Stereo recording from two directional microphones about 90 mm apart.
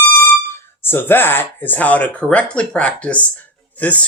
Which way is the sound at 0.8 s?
25° left (ahead or behind).